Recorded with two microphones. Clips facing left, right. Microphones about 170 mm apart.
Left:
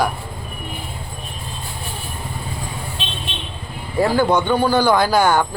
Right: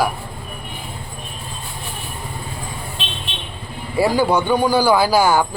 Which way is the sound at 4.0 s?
10° right (ahead or behind).